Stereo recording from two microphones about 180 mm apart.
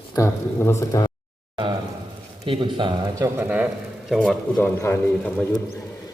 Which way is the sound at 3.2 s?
10° right (ahead or behind).